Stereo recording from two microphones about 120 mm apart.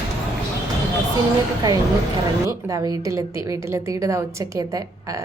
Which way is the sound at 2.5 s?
30° right (ahead or behind).